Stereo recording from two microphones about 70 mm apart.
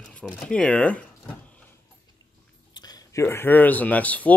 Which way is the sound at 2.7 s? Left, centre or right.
Left.